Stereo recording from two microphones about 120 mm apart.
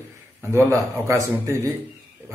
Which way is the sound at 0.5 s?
25° right (ahead or behind).